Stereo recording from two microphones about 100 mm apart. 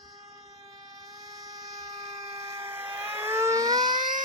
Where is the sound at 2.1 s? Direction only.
90° right.